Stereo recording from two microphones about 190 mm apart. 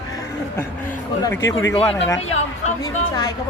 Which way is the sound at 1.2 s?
15° left (ahead or behind).